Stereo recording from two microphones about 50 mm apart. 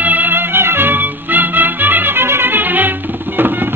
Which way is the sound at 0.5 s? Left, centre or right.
Right.